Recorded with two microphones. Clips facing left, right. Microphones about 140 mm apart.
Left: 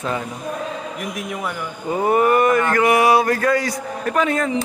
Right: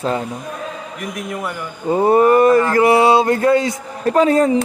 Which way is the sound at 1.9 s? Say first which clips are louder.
Right 5 dB; 30° right (ahead or behind).